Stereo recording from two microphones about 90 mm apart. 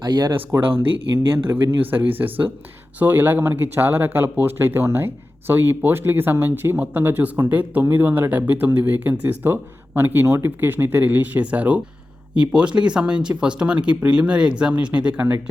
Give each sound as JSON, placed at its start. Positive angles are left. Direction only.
{"t": 0.0, "sound": "speech", "side_deg": -55}
{"t": 0.3, "sound": "speech", "side_deg": -25}